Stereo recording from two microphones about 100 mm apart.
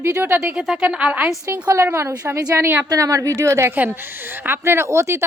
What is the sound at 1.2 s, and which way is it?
A woman's voice, 25° right (ahead or behind).